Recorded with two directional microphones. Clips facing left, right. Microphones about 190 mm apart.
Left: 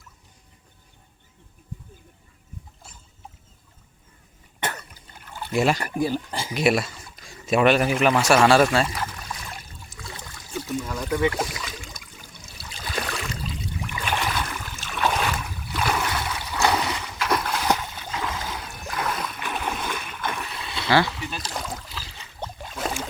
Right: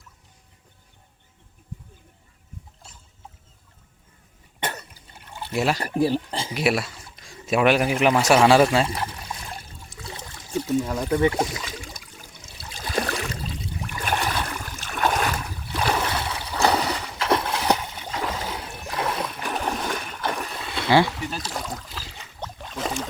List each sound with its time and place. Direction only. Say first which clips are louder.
5.8 s speech: right 3 dB; 30° right (ahead or behind)
6.6 s speech: left 2 dB; 5° right (ahead or behind)
8.9 s pour: right 1 dB; 30° right (ahead or behind)
10.0 s trickle: right 2 dB; 25° right (ahead or behind)
11.3 s speech: right 3 dB; 30° right (ahead or behind)
12.7 s a sound: right 4 dB; 40° right (ahead or behind); by 18.1 s 20° right (ahead or behind)
18.1 s a sound: right 2 dB; 35° right (ahead or behind)
21.4 s a sound: right 1 dB; centre (ahead or behind)
21.8 s boat: right 1 dB; 45° right (ahead or behind)
22.4 s boat: even; 5° left (ahead or behind)